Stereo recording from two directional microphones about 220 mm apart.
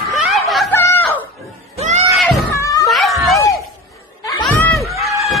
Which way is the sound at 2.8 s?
Centre (ahead or behind).